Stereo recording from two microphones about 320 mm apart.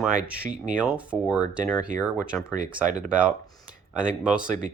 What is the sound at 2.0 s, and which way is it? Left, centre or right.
Speech, centre.